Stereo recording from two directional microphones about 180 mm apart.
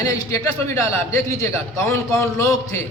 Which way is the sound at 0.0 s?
20° left (ahead or behind).